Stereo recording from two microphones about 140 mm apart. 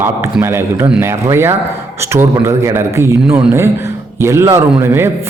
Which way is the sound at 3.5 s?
20° right (ahead or behind).